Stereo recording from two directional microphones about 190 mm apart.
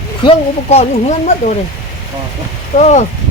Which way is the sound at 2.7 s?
40° left (ahead or behind).